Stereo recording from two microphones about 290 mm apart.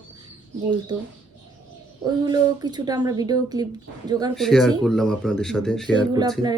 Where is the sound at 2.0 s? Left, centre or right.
Centre.